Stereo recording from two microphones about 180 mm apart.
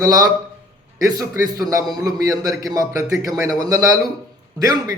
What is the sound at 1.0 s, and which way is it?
A man's voice, 20° right (ahead or behind).